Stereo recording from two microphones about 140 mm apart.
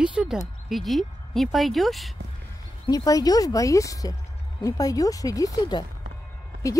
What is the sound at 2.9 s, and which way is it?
Speech, 25° left (ahead or behind).